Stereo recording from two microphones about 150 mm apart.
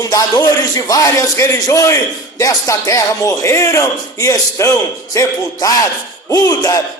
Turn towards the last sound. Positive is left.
turn(degrees=25)  # may be behind; listen again after turning